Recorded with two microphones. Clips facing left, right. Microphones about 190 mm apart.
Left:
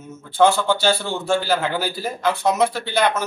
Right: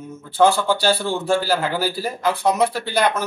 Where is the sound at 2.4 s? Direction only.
10° right (ahead or behind).